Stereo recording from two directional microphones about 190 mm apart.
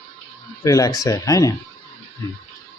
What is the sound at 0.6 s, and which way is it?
Speech, 20° left (ahead or behind).